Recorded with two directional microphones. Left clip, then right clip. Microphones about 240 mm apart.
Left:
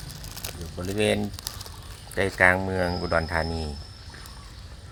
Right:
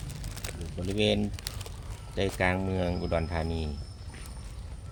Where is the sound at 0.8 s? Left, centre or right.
Centre.